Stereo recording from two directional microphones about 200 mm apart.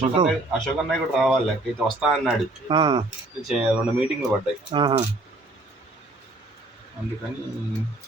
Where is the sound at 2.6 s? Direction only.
25° right (ahead or behind).